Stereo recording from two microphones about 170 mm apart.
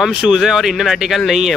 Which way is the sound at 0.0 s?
5° right (ahead or behind).